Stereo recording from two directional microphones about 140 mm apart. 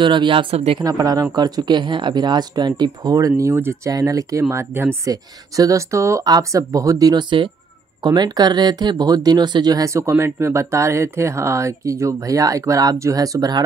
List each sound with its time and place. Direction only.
0.0 s speech: 35° right (ahead or behind)
0.8 s speech: 25° right (ahead or behind)